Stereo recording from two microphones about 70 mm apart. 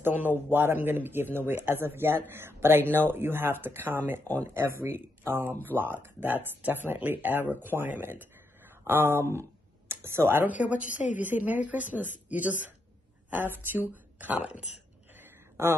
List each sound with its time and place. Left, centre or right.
0.0 s a woman's voice: right
15.6 s speech: right